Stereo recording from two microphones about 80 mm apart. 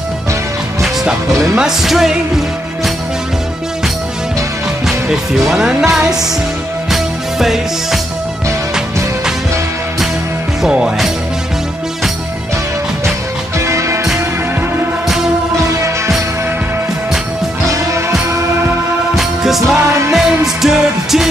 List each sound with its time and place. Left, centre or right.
0.8 s music: centre
5.4 s speech: centre
6.9 s music: centre
10.6 s speech: centre
13.6 s music: right
18.3 s music: right
19.1 s music: centre